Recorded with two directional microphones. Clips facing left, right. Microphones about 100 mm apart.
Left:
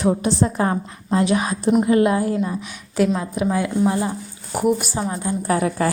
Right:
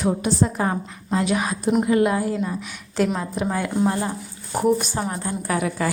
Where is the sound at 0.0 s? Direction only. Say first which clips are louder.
Left 2 dB; 5° right (ahead or behind).